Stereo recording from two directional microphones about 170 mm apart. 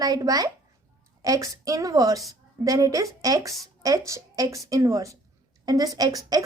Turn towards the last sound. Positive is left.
turn(degrees=-20)  # may be behind; listen again after turning